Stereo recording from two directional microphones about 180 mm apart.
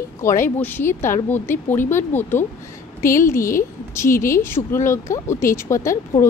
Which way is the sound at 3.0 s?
50° left (ahead or behind).